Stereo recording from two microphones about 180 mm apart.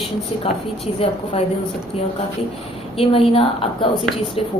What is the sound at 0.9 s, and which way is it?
Speech, 35° left (ahead or behind).